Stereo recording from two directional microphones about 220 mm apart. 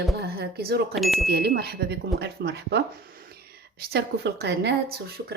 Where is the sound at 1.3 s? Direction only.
45° right (ahead or behind).